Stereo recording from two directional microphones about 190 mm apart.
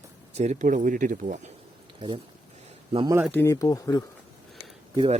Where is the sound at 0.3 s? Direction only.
40° right (ahead or behind).